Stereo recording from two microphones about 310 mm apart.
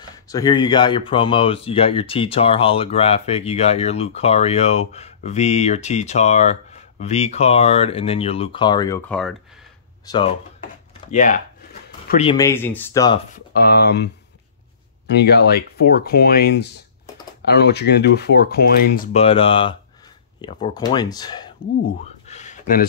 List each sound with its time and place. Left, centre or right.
0.0 s speech: centre
13.3 s speech: left; by 21.5 s centre
22.3 s a sound: left